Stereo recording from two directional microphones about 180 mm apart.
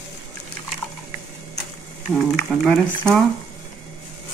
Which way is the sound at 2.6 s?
5° left (ahead or behind).